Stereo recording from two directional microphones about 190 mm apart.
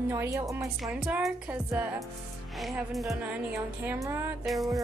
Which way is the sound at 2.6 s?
Centre (ahead or behind).